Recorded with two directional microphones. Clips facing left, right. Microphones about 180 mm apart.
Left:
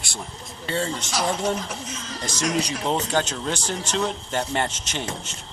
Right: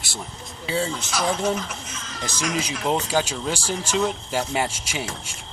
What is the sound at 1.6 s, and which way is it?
Speech, 35° left (ahead or behind).